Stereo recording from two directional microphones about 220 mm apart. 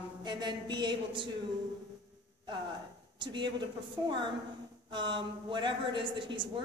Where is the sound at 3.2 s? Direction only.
20° right (ahead or behind).